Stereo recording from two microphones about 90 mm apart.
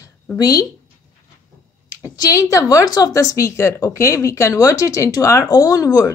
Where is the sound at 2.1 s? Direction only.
45° left (ahead or behind).